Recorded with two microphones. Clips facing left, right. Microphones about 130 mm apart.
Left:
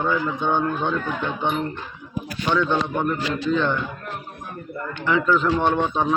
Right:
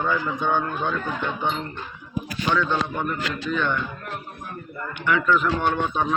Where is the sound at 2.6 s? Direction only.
25° left (ahead or behind).